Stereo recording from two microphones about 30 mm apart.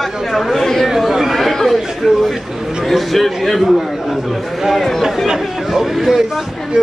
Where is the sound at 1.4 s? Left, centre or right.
Centre.